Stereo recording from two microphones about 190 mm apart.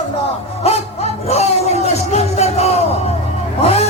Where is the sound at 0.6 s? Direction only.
35° left (ahead or behind).